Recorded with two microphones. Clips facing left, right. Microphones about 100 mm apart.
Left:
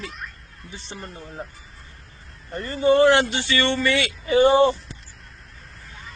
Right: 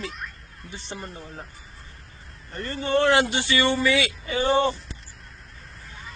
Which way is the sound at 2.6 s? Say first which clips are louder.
Left 6 dB; centre (ahead or behind).